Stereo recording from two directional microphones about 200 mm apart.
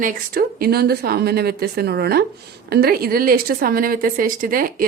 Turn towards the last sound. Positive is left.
turn(degrees=-45)  # may be behind; listen again after turning